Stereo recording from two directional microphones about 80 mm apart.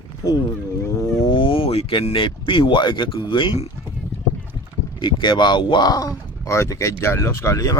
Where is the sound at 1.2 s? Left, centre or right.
Left.